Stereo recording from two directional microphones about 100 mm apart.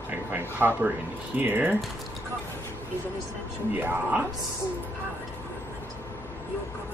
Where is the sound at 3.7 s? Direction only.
20° right (ahead or behind).